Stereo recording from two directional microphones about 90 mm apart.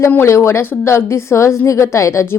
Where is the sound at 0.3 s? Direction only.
30° left (ahead or behind).